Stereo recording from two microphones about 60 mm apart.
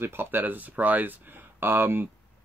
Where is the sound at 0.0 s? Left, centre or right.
Right.